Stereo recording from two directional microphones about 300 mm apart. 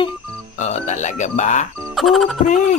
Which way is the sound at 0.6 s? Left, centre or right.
Left.